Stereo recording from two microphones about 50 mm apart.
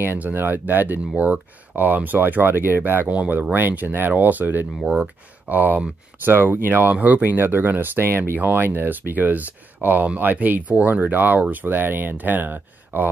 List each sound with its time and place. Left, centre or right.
0.0 s speech: right
4.8 s speech: right
5.5 s speech: right
6.2 s speech: right
8.4 s speech: right